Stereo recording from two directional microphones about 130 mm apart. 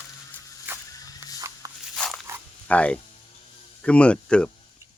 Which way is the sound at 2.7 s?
10° left (ahead or behind).